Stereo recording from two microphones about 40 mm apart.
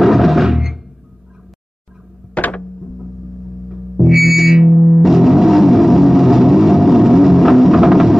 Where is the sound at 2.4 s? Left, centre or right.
Left.